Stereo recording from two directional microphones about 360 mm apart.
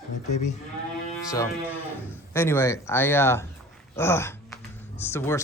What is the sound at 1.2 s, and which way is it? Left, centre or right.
Music, centre.